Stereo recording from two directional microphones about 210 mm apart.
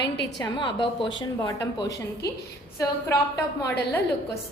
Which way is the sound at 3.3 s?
15° left (ahead or behind).